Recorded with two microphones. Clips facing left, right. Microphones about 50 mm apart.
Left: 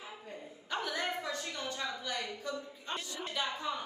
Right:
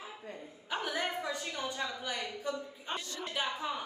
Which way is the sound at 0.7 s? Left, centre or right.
Centre.